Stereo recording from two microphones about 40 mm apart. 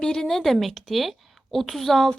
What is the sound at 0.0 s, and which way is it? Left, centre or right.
Speech, centre.